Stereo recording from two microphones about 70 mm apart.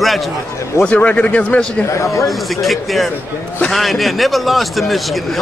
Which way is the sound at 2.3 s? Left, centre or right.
Centre.